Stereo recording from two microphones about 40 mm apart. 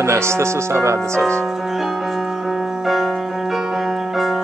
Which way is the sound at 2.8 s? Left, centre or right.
Centre.